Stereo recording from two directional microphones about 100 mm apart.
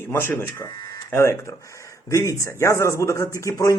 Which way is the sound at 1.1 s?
25° left (ahead or behind).